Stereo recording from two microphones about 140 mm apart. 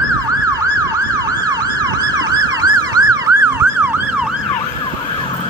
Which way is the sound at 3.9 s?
15° right (ahead or behind).